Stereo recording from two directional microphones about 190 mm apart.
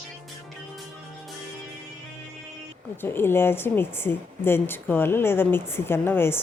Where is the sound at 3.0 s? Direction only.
10° left (ahead or behind).